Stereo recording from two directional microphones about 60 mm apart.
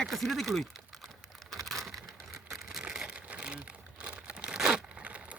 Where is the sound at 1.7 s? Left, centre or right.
Centre.